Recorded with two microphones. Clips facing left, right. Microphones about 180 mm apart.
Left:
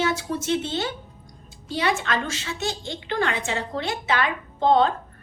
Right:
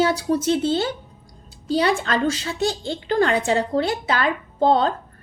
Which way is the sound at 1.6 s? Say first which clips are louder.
Right 5 dB; 35° right (ahead or behind).